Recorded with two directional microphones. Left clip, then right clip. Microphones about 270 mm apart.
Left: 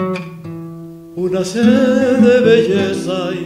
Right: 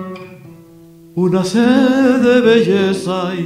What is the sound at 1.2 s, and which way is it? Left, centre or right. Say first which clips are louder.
Singing: right 2 dB; right.